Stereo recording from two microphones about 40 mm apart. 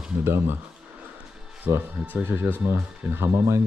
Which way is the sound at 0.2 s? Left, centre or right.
Right.